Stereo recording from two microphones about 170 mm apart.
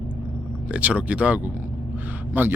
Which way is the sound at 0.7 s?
5° right (ahead or behind).